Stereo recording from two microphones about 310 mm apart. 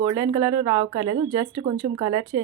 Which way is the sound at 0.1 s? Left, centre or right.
Centre.